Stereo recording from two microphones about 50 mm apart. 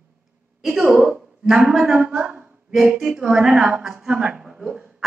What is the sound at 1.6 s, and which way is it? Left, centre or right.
Speech, right.